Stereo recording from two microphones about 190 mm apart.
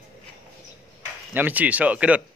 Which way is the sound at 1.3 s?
10° right (ahead or behind).